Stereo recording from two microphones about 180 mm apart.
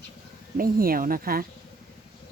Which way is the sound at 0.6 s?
55° right (ahead or behind).